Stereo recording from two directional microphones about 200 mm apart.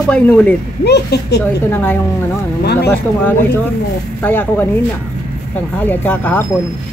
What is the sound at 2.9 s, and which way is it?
Speech, 10° left (ahead or behind).